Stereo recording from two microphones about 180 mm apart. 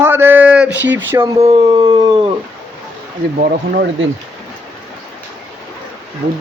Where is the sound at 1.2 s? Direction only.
30° right (ahead or behind).